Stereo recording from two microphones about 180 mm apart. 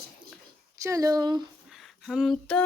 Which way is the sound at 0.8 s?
20° right (ahead or behind).